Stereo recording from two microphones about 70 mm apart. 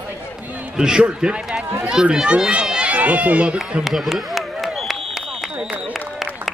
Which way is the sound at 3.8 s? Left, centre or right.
Centre.